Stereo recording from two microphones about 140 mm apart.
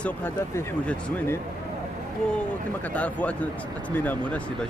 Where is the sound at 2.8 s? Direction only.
10° left (ahead or behind).